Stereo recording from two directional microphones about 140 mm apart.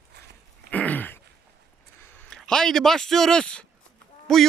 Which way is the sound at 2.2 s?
5° left (ahead or behind).